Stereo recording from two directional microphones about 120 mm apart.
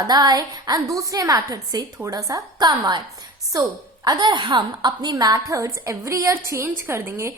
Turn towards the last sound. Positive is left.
turn(degrees=-20)  # may be behind; listen again after turning